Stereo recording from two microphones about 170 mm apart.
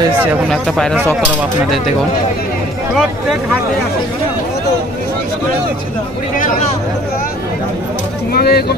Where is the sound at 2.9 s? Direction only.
5° right (ahead or behind).